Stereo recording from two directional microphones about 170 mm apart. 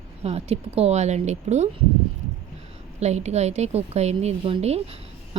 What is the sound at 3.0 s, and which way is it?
A woman's voice, 40° right (ahead or behind).